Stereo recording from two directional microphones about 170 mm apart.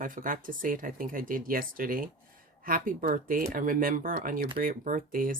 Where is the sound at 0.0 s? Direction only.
55° right (ahead or behind).